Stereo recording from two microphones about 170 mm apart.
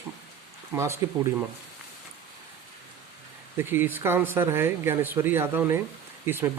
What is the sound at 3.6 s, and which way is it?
Speech, 10° right (ahead or behind).